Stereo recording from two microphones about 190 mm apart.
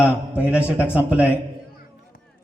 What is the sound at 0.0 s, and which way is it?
A man's voice, 5° right (ahead or behind).